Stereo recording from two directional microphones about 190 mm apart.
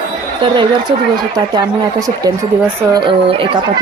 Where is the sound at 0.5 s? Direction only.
25° right (ahead or behind).